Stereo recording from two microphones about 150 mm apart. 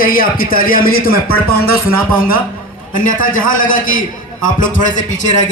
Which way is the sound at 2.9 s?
65° left (ahead or behind).